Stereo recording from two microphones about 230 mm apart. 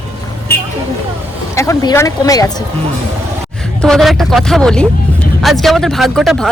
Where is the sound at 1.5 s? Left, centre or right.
Centre.